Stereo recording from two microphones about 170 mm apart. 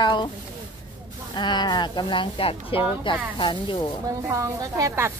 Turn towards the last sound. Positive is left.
turn(degrees=-15)  # may be behind; listen again after turning